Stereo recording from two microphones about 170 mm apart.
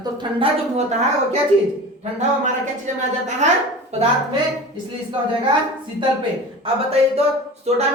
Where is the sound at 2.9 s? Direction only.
45° right (ahead or behind).